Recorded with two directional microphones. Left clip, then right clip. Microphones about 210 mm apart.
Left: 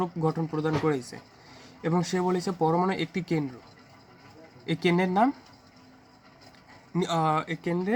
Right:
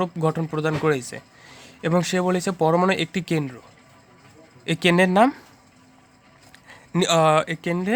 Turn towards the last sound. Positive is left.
turn(degrees=-50)  # may be behind; listen again after turning